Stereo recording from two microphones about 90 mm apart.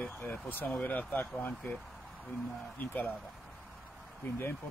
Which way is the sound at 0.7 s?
20° left (ahead or behind).